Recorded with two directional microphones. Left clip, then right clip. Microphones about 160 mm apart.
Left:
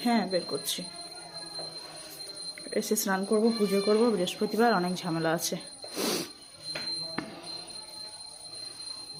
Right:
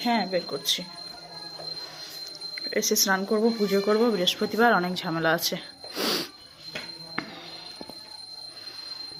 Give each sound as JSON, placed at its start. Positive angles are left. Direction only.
{"t": 0.0, "sound": "speech", "side_deg": 20}
{"t": 2.6, "sound": "speech", "side_deg": 5}